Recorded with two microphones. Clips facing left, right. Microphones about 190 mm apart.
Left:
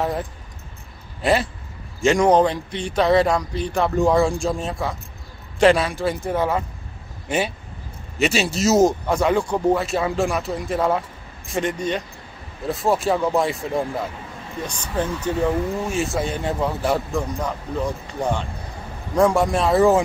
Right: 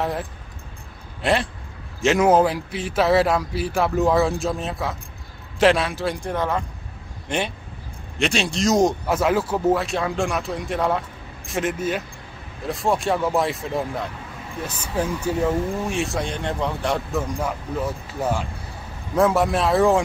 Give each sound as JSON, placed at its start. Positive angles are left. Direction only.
{"t": 0.0, "sound": "speech", "side_deg": 0}
{"t": 17.3, "sound": "speech", "side_deg": -10}